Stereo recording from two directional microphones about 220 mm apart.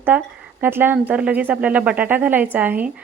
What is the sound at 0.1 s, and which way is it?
Speech, 10° right (ahead or behind).